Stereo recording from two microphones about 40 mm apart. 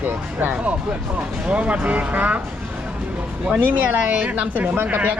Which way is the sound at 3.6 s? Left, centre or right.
Right.